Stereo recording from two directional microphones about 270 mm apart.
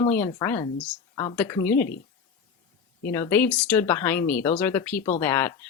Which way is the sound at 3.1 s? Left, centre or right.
Centre.